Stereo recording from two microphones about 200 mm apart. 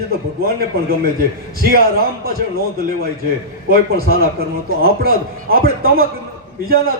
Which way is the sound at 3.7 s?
50° right (ahead or behind).